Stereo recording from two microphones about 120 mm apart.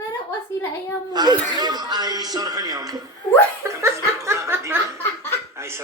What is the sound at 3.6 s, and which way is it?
Chuckle, 25° right (ahead or behind).